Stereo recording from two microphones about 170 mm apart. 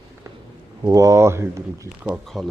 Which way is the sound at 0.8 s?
20° right (ahead or behind).